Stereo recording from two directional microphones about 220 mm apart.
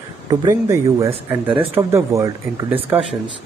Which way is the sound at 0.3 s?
15° right (ahead or behind).